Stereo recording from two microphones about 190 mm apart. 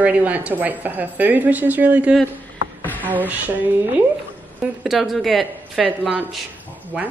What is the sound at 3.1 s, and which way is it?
Speech, 10° right (ahead or behind).